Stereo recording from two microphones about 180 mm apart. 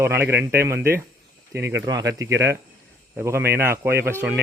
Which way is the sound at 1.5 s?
80° right.